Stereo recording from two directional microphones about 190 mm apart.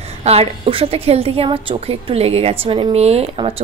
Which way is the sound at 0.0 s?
35° right (ahead or behind).